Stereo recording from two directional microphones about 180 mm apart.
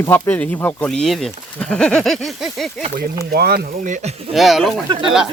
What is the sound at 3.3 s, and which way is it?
Speech, 60° right (ahead or behind).